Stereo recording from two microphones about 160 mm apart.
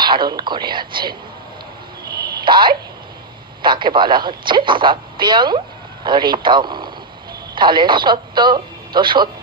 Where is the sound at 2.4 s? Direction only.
30° right (ahead or behind).